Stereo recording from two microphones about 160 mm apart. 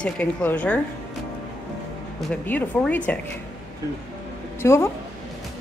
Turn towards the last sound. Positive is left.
turn(degrees=15)  # may be behind; listen again after turning